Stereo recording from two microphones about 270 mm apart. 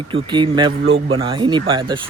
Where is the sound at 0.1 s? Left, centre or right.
Centre.